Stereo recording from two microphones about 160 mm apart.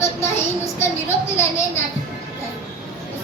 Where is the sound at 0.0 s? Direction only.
15° left (ahead or behind).